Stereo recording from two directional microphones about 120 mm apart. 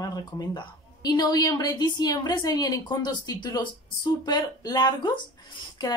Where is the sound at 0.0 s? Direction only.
30° left (ahead or behind).